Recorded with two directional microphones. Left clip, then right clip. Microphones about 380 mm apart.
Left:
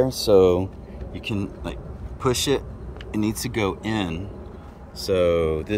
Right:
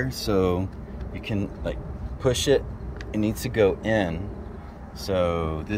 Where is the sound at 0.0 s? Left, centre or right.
Centre.